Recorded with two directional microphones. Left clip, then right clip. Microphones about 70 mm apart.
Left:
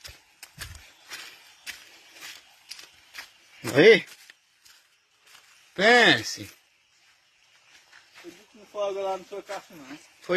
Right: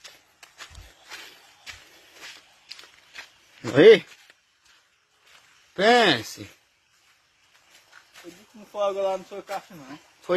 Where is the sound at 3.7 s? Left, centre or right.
Right.